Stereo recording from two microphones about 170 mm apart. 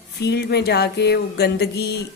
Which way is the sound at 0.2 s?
75° left (ahead or behind).